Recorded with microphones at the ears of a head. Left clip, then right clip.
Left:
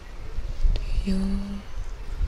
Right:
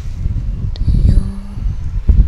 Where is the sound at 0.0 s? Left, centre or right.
Right.